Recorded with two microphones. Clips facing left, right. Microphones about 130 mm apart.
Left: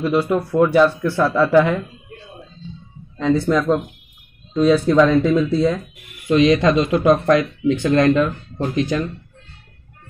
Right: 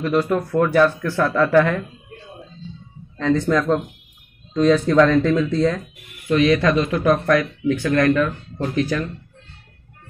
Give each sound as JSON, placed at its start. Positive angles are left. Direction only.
{"t": 0.0, "sound": "speech", "side_deg": 10}
{"t": 3.2, "sound": "speech", "side_deg": 10}